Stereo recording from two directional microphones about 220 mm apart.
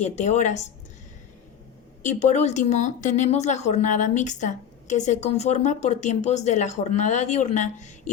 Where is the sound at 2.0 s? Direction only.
30° left (ahead or behind).